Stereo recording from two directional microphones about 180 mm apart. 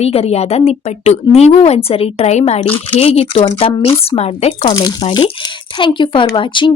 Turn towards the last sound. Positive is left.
turn(degrees=25)  # may be behind; listen again after turning